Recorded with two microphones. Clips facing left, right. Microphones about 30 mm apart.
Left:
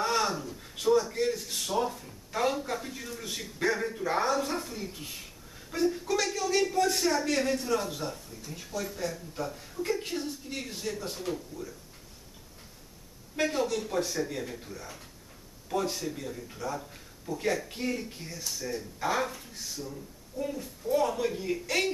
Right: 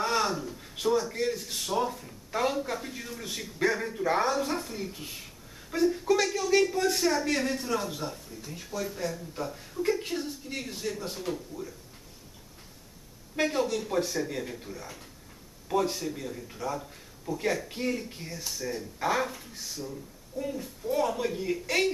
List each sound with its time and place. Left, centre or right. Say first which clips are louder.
0.0 s a man's voice: right 1 dB; centre
13.4 s a man's voice: right 1 dB; centre